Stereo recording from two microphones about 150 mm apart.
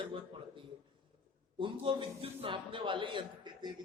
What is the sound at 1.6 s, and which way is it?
A man's voice, 35° right (ahead or behind).